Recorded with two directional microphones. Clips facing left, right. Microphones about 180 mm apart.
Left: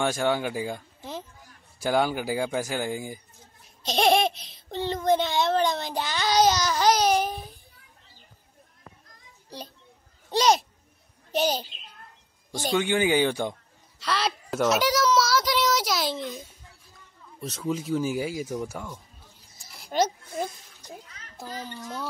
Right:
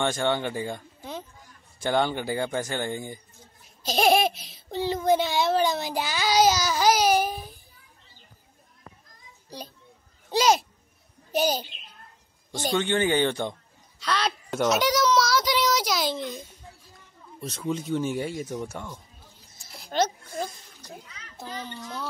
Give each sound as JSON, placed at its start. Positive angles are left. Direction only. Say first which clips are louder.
{"t": 0.0, "sound": "speech", "louder": "left 1 dB", "side_deg": 5}
{"t": 3.8, "sound": "a child's voice", "louder": "even", "side_deg": -5}
{"t": 10.3, "sound": "a child's voice", "louder": "even", "side_deg": 0}
{"t": 21.5, "sound": "a child's voice", "louder": "even", "side_deg": 35}